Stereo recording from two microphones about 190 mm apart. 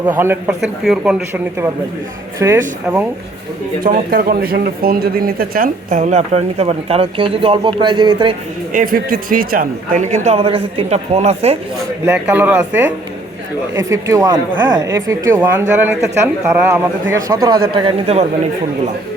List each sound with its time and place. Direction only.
0.0 s speech: 10° right (ahead or behind)
3.8 s speech: 50° right (ahead or behind); by 8.4 s 25° right (ahead or behind)
8.7 s speech: 45° right (ahead or behind)
12.0 s speech: 5° right (ahead or behind); by 18.3 s 35° right (ahead or behind)